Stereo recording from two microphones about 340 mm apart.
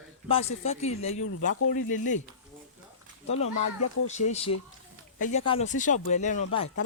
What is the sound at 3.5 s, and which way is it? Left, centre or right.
Speech, left.